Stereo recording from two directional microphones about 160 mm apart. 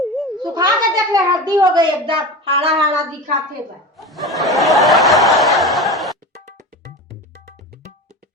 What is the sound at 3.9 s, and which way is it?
Snicker, centre (ahead or behind).